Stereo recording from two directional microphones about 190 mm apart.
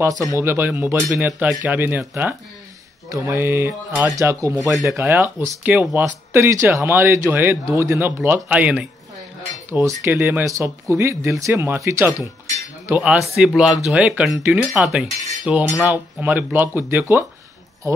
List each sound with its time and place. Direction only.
0.3 s speech: 15° right (ahead or behind)
4.6 s speech: centre (ahead or behind)
4.8 s speech: 15° right (ahead or behind)
15.4 s cutlery: 5° right (ahead or behind)
15.9 s speech: 10° right (ahead or behind)